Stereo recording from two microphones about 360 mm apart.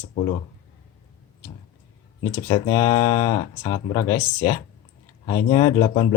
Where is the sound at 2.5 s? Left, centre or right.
Centre.